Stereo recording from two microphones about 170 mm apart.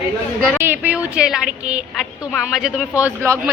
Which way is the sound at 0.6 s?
10° right (ahead or behind).